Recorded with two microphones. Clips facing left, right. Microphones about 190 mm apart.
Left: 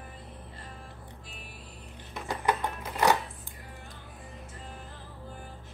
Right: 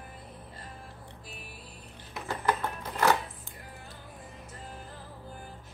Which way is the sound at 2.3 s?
15° left (ahead or behind).